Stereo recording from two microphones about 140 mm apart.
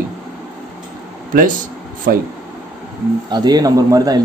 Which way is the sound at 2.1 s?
90° right.